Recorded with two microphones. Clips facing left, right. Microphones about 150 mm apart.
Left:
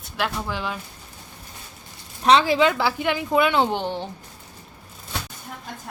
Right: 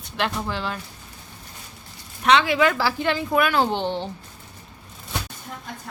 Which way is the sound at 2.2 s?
35° left (ahead or behind).